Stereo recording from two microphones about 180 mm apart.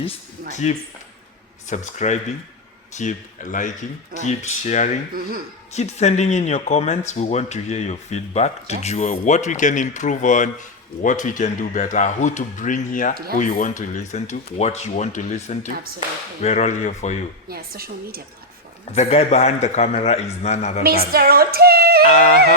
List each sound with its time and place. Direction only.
0.5 s speech: 40° left (ahead or behind)
17.5 s a woman's voice: 60° right (ahead or behind)
18.9 s speech: 35° left (ahead or behind)
21.1 s music: 55° right (ahead or behind)